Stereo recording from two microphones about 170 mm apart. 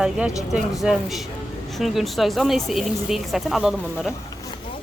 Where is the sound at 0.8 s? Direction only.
Centre (ahead or behind).